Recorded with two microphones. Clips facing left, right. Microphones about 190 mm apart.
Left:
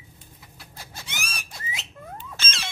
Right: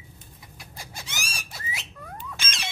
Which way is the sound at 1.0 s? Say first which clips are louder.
Left 2 dB; 55° left (ahead or behind).